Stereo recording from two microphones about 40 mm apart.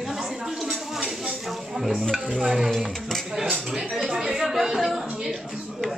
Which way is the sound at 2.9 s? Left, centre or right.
Centre.